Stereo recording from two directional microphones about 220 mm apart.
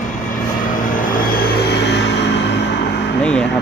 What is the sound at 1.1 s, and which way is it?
Vehicle, 40° left (ahead or behind).